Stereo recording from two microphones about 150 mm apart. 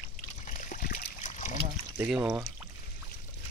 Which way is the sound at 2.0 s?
5° right (ahead or behind).